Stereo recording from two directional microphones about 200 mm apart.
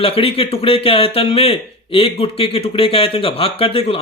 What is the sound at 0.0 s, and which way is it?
Speech, 30° left (ahead or behind).